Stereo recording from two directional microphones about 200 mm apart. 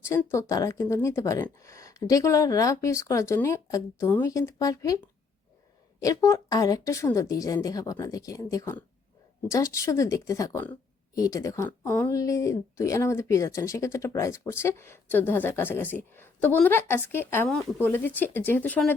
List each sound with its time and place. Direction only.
0.0 s speech: 15° left (ahead or behind)
6.0 s speech: 15° left (ahead or behind)